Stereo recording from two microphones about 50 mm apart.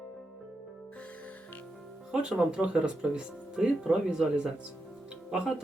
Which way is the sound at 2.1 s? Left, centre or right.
Centre.